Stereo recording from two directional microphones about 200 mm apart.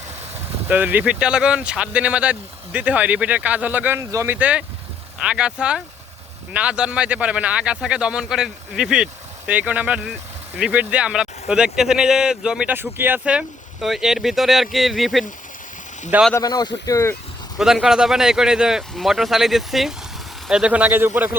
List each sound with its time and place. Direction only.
0.7 s speech: 10° right (ahead or behind)
16.3 s speech: 20° left (ahead or behind)
17.6 s speech: centre (ahead or behind)